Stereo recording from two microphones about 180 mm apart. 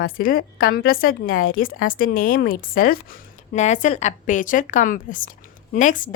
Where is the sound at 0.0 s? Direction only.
50° left (ahead or behind).